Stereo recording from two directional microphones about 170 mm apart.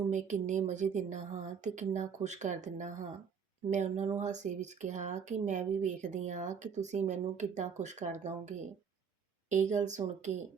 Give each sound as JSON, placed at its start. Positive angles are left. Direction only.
{"t": 0.1, "sound": "speech", "side_deg": -45}